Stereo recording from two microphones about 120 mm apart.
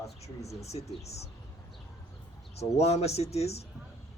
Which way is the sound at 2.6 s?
60° left (ahead or behind).